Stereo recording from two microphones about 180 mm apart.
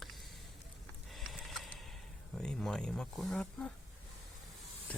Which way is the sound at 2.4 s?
5° left (ahead or behind).